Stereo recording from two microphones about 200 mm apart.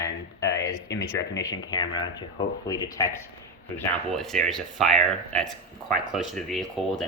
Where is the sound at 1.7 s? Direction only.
20° left (ahead or behind).